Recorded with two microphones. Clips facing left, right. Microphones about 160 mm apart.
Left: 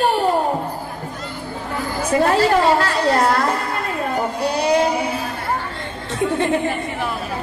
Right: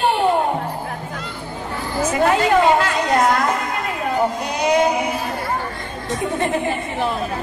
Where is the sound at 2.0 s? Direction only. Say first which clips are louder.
Left 1 dB; 35° left (ahead or behind).